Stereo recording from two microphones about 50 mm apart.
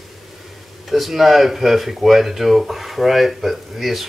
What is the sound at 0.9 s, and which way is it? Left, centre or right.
Speech, centre.